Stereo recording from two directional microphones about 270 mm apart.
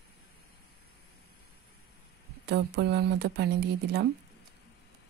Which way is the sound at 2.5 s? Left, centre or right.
Right.